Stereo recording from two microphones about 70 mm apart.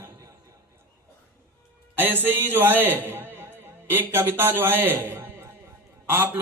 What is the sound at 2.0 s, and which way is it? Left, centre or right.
A man's voice, right.